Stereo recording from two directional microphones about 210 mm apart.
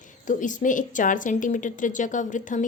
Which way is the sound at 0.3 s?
35° left (ahead or behind).